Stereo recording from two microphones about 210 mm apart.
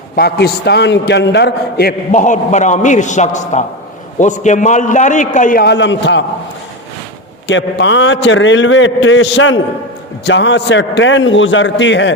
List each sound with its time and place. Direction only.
0.2 s a man's voice: 50° left (ahead or behind)
7.4 s a man's voice: 60° left (ahead or behind)